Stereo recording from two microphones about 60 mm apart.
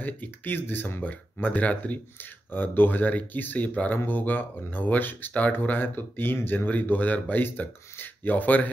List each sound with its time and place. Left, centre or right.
0.0 s speech: left
2.5 s speech: left